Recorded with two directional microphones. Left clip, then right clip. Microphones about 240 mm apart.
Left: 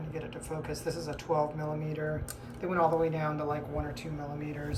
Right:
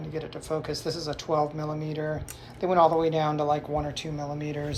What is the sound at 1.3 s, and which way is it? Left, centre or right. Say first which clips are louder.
Speech: right 3 dB; left.